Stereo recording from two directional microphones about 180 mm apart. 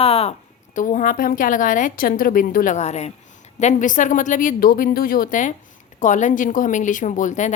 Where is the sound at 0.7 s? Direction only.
45° left (ahead or behind).